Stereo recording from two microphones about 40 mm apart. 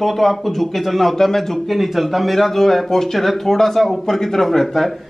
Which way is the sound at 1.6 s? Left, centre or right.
Centre.